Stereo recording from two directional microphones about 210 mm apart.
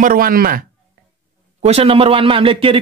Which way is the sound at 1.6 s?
30° right (ahead or behind).